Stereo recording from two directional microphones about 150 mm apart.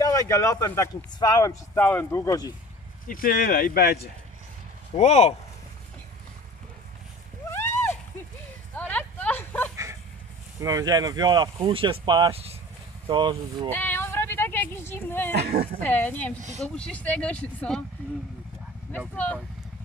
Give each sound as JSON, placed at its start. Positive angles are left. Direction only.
{"t": 0.0, "sound": "speech", "side_deg": 20}
{"t": 1.8, "sound": "speech", "side_deg": 10}
{"t": 2.2, "sound": "speech", "side_deg": 25}
{"t": 3.1, "sound": "speech", "side_deg": 70}
{"t": 4.9, "sound": "speech", "side_deg": 45}
{"t": 7.5, "sound": "a sound", "side_deg": 15}
{"t": 10.6, "sound": "speech", "side_deg": -25}
{"t": 11.5, "sound": "speech", "side_deg": -40}
{"t": 13.7, "sound": "a sound", "side_deg": 15}
{"t": 15.4, "sound": "a sound", "side_deg": -90}
{"t": 15.8, "sound": "speech", "side_deg": 10}
{"t": 18.9, "sound": "speech", "side_deg": 10}